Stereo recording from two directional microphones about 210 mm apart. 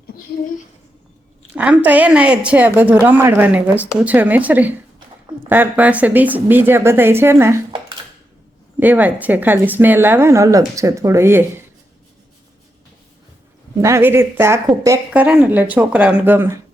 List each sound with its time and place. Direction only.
1.5 s speech: 5° right (ahead or behind)
4.9 s a sound: 20° right (ahead or behind)
5.5 s speech: 10° right (ahead or behind)
8.8 s speech: 10° right (ahead or behind)
13.8 s speech: 10° right (ahead or behind)